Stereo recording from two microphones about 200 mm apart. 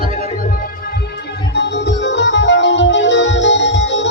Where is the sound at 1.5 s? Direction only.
60° left (ahead or behind).